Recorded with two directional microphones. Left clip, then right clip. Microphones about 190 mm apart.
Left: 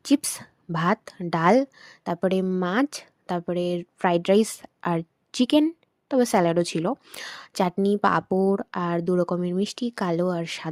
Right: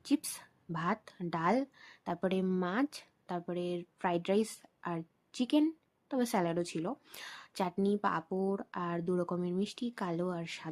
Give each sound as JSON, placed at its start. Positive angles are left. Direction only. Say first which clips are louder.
{"t": 0.0, "sound": "speech", "louder": "left 11 dB", "side_deg": 45}